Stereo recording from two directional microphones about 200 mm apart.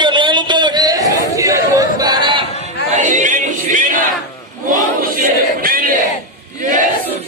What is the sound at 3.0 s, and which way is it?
Music, 40° right (ahead or behind).